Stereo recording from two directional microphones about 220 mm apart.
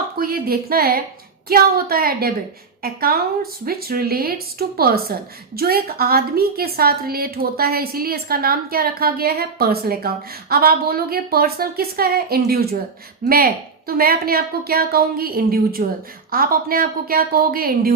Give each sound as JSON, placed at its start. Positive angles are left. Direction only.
{"t": 0.2, "sound": "a woman's voice", "side_deg": -45}